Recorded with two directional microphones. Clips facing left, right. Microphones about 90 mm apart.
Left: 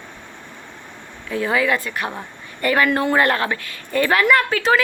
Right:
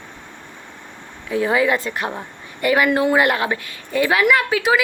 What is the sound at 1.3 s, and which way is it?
Speech, 20° right (ahead or behind).